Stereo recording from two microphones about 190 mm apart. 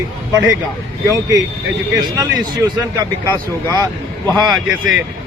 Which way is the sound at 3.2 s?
15° left (ahead or behind).